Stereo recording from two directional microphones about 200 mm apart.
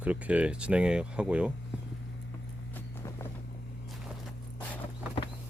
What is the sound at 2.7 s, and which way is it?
Vehicle, 15° left (ahead or behind).